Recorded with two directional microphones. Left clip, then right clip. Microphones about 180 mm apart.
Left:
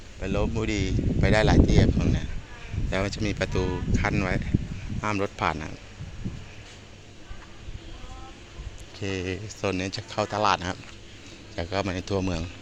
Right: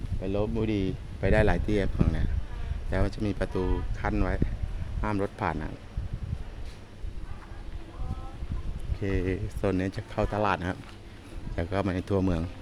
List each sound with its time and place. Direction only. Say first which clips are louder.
0.2 s speech: left 1 dB; 20° right (ahead or behind); by 2.1 s 35° right (ahead or behind)
2.9 s speech: left 3 dB; 5° right (ahead or behind)
9.0 s speech: even; 30° right (ahead or behind)